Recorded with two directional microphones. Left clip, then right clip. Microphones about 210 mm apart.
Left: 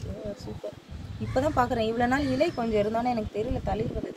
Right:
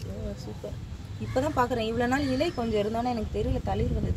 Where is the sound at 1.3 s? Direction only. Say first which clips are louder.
Left 1 dB; 10° right (ahead or behind).